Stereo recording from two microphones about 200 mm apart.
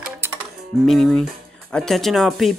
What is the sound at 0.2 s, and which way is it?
Music, 10° right (ahead or behind).